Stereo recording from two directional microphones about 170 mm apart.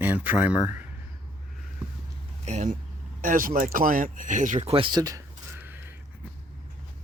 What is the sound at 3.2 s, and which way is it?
Speech, 50° right (ahead or behind).